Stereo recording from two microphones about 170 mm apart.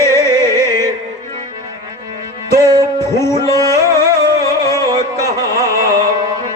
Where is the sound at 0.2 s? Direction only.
15° left (ahead or behind).